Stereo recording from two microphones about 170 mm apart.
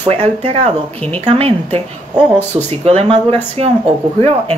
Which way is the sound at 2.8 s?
35° right (ahead or behind).